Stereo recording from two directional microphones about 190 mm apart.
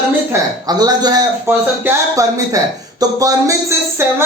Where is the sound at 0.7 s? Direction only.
20° right (ahead or behind).